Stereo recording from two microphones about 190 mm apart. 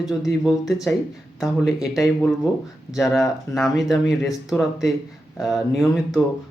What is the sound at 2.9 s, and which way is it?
Speech, centre (ahead or behind).